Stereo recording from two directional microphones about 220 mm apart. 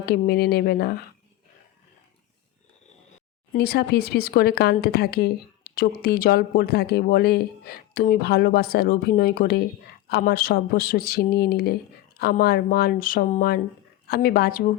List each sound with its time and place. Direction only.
0.0 s speech: 45° left (ahead or behind)
3.5 s speech: 45° left (ahead or behind)